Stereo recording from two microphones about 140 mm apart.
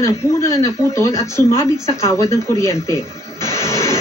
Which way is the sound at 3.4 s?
20° left (ahead or behind).